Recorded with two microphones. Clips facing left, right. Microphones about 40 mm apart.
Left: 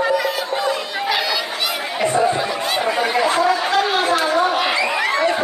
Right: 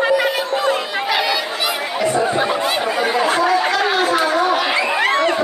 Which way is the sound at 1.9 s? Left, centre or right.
Left.